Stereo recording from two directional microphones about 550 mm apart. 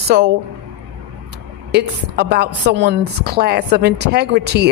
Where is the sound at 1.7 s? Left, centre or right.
Centre.